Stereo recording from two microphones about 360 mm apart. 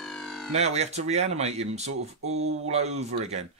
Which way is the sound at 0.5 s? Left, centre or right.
Centre.